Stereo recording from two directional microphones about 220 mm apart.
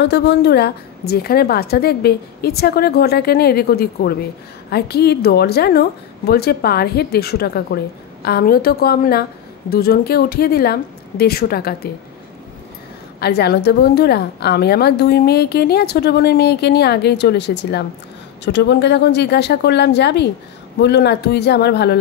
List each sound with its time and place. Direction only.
0.0 s a woman's voice: 50° left (ahead or behind)
13.2 s a woman's voice: 45° left (ahead or behind)